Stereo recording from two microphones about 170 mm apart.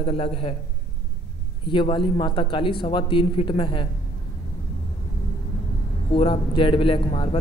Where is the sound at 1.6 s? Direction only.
30° left (ahead or behind).